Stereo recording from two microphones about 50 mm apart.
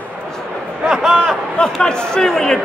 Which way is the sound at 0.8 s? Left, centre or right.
Centre.